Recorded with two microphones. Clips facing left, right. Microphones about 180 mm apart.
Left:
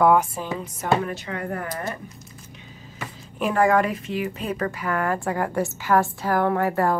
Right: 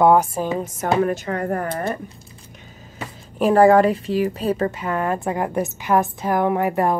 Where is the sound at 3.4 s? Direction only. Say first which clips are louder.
Right 6 dB; 35° right (ahead or behind).